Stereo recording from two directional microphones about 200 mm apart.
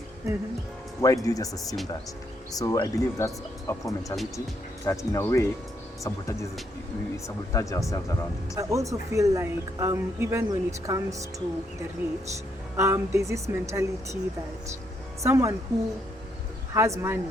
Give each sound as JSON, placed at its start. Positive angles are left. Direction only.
{"t": 1.0, "sound": "speech", "side_deg": 15}
{"t": 3.8, "sound": "speech", "side_deg": 0}
{"t": 4.9, "sound": "speech", "side_deg": 15}
{"t": 8.5, "sound": "a woman's voice", "side_deg": -15}
{"t": 12.7, "sound": "a woman's voice", "side_deg": -15}
{"t": 15.2, "sound": "a woman's voice", "side_deg": -15}
{"t": 16.7, "sound": "a woman's voice", "side_deg": -15}